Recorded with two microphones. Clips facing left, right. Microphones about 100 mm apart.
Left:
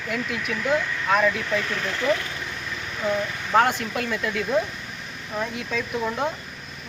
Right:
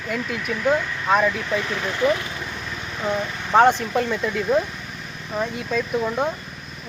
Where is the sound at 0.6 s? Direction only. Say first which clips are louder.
Right 3 dB; 20° right (ahead or behind).